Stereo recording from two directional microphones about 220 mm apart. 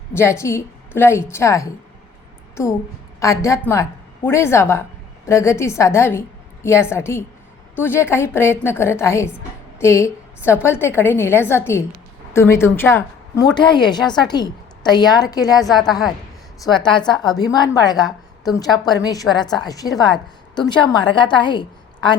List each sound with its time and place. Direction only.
0.1 s a woman's voice: 10° left (ahead or behind)
3.2 s a woman's voice: 15° left (ahead or behind)
15.6 s a woman's voice: centre (ahead or behind)
16.7 s a woman's voice: 20° left (ahead or behind)